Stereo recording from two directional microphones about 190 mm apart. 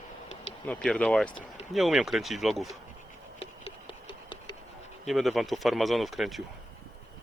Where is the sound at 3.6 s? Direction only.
25° left (ahead or behind).